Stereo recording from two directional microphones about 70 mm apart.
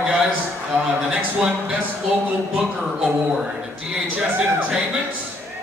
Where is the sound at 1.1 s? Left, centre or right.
Centre.